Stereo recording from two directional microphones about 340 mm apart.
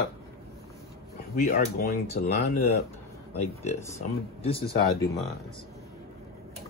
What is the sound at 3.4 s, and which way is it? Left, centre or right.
Speech, centre.